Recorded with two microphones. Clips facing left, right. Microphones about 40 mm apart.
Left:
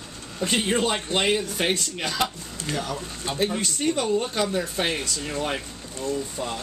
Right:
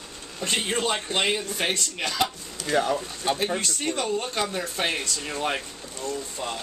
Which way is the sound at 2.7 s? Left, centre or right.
Right.